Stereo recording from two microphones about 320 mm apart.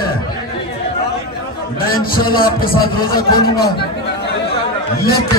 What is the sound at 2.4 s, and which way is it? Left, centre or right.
A man's voice, left.